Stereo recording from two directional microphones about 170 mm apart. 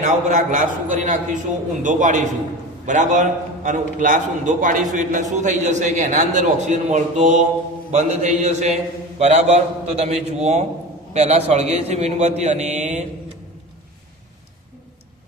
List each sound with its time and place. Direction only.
0.0 s a man's voice: 45° right (ahead or behind)